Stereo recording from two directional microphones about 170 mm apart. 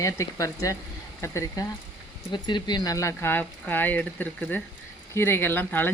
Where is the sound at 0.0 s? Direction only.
20° left (ahead or behind).